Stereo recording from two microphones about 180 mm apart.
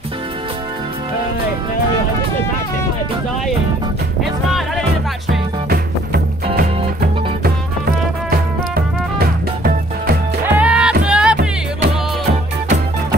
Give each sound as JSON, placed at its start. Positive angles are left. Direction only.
{"t": 8.3, "sound": "music", "side_deg": -60}
{"t": 10.4, "sound": "music", "side_deg": -10}